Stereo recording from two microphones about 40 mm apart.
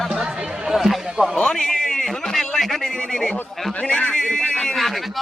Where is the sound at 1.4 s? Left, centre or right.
Centre.